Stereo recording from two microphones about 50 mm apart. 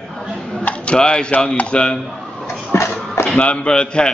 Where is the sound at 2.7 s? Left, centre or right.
Left.